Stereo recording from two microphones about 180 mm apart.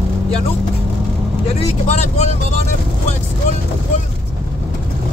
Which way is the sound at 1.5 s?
35° left (ahead or behind).